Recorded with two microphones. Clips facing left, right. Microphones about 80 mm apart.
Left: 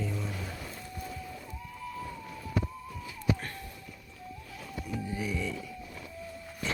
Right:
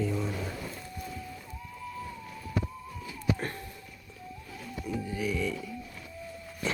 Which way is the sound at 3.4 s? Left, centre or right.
Right.